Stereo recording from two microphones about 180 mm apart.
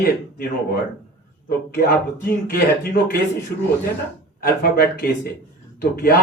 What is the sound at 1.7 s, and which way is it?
Speech, 55° left (ahead or behind).